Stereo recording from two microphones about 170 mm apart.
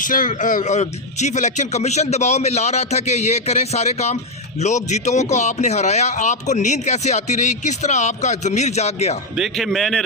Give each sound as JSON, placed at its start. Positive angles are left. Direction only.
{"t": 0.0, "sound": "speech", "side_deg": 50}
{"t": 9.4, "sound": "a man's voice", "side_deg": 0}